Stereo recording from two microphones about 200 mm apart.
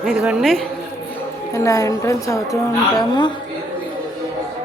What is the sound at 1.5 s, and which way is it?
A woman's voice, 15° left (ahead or behind).